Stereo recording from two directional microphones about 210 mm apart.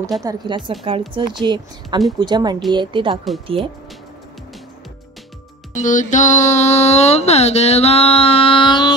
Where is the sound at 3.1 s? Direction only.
Centre (ahead or behind).